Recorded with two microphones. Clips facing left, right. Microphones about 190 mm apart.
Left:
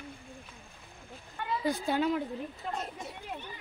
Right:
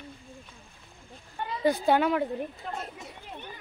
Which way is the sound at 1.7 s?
65° right (ahead or behind).